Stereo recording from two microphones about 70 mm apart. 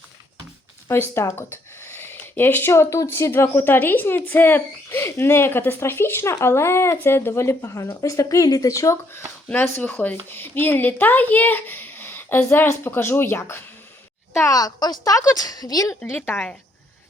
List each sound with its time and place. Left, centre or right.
0.9 s speech: left
3.3 s a woman's voice: left
9.6 s a woman's voice: left
14.5 s a woman's voice: left
16.1 s a woman's voice: left